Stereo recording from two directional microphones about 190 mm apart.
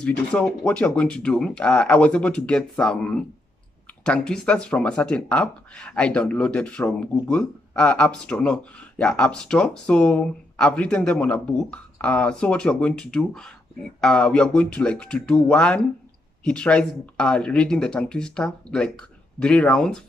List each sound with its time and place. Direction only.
0.0 s speech: 5° left (ahead or behind)